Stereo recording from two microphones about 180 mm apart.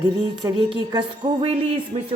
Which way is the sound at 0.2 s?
25° right (ahead or behind).